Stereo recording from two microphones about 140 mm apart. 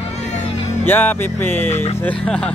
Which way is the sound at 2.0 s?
10° left (ahead or behind).